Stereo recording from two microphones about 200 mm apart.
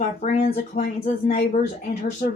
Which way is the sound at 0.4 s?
45° left (ahead or behind).